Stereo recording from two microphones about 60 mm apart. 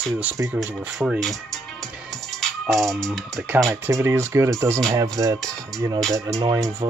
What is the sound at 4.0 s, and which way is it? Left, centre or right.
Speech, right.